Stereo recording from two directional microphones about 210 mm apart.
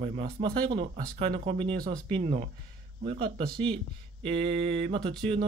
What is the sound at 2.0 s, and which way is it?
A man's voice, 30° right (ahead or behind).